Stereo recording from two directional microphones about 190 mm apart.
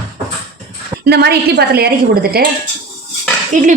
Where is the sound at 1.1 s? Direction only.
60° right (ahead or behind).